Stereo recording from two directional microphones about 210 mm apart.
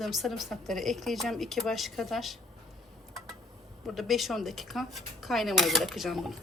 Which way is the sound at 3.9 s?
Centre (ahead or behind).